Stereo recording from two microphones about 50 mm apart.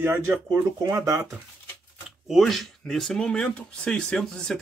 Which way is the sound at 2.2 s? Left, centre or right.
Centre.